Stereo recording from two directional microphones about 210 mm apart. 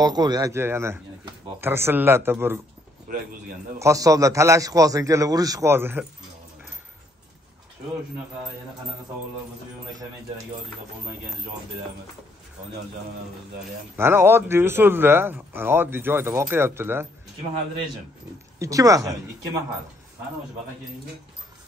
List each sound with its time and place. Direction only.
0.0 s speech: 20° right (ahead or behind)
3.8 s speech: 15° right (ahead or behind)
13.9 s speech: 10° right (ahead or behind)
18.6 s speech: 15° right (ahead or behind)